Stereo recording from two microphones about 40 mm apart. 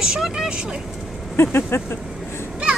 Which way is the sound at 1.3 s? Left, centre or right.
Left.